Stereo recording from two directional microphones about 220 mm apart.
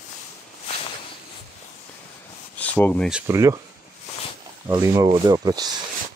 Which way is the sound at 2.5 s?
5° left (ahead or behind).